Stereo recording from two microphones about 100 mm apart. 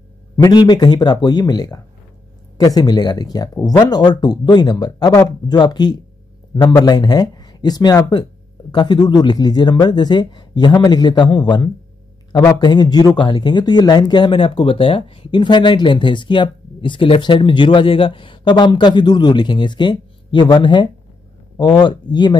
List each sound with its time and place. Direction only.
0.4 s speech: 45° left (ahead or behind)